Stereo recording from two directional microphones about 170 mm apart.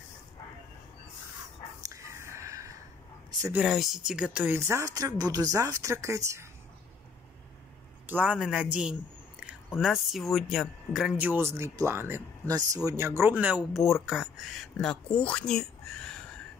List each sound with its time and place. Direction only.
1.8 s a sound: 15° right (ahead or behind)
3.5 s speech: 5° right (ahead or behind)
8.1 s speech: 10° right (ahead or behind)
9.8 s speech: centre (ahead or behind)